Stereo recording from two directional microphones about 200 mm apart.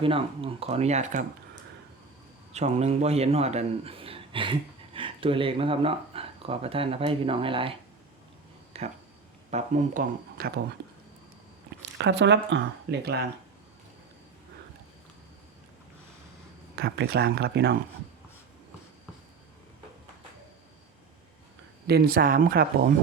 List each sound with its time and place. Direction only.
0.0 s speech: 25° right (ahead or behind)
2.5 s a man's voice: 35° right (ahead or behind); by 10.6 s 50° right (ahead or behind)
11.9 s speech: 60° right (ahead or behind)
16.7 s speech: 55° right (ahead or behind)
21.8 s speech: 50° right (ahead or behind)